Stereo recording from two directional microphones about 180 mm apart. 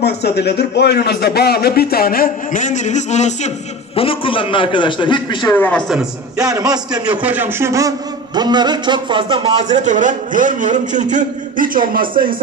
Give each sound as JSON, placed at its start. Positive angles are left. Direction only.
{"t": 0.0, "sound": "a man's voice", "side_deg": 65}
{"t": 5.6, "sound": "a man's voice", "side_deg": 5}
{"t": 6.3, "sound": "speech", "side_deg": -20}
{"t": 7.1, "sound": "a man's voice", "side_deg": -10}